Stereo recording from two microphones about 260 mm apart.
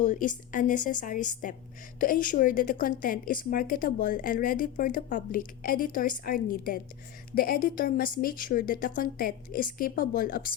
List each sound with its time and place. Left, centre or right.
0.0 s a woman's voice: left